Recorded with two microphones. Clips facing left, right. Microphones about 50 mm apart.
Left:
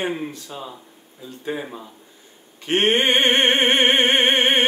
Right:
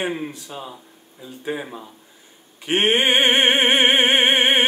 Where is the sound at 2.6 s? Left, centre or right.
Centre.